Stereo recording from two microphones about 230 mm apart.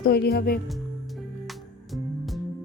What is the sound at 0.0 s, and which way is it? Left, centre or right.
Speech, left.